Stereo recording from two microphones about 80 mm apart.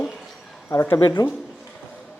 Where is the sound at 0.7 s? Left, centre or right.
Left.